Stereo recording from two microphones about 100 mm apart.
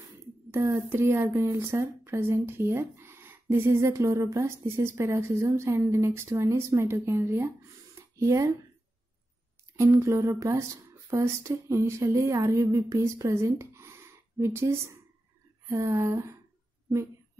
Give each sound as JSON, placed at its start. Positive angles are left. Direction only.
{"t": 0.5, "sound": "speech", "side_deg": -30}
{"t": 10.0, "sound": "speech", "side_deg": -30}
{"t": 15.7, "sound": "speech", "side_deg": -30}